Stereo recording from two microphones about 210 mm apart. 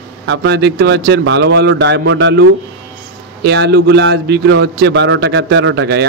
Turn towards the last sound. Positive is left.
turn(degrees=-55)  # may be behind; listen again after turning